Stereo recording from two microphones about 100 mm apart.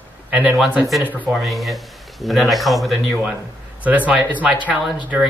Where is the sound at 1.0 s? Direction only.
15° right (ahead or behind).